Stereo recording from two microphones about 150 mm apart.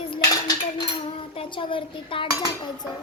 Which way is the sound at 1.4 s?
35° left (ahead or behind).